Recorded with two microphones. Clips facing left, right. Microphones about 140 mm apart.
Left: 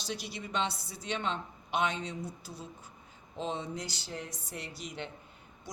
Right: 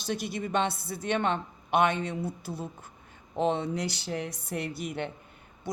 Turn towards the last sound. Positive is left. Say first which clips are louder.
# right 8 dB
turn(degrees=-60)  # may be behind; listen again after turning